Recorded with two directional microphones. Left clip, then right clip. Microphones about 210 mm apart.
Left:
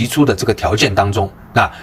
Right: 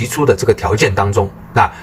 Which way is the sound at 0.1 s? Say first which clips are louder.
Right 4 dB; 35° left (ahead or behind).